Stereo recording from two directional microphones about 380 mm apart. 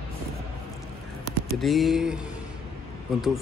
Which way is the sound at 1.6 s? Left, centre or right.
Centre.